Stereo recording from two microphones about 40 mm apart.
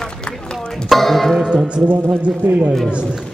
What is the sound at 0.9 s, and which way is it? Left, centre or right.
Music, centre.